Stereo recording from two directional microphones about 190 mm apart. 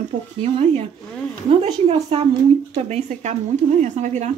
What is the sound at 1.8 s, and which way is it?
Speech, 35° right (ahead or behind).